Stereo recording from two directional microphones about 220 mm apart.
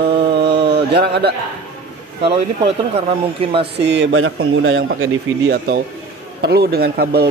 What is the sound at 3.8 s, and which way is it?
Speech, 55° right (ahead or behind).